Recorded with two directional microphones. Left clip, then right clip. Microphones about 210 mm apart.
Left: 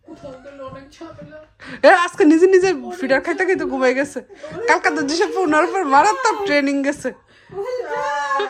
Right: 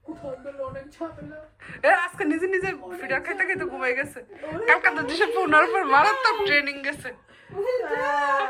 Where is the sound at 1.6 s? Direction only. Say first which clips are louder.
Left 8 dB; 30° left (ahead or behind).